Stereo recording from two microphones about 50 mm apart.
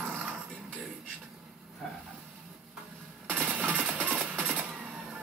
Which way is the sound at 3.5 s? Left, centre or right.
Right.